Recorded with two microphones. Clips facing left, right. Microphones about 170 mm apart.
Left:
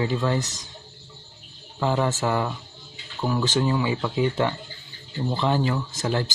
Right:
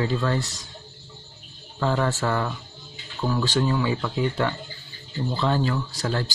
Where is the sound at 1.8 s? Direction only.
15° left (ahead or behind).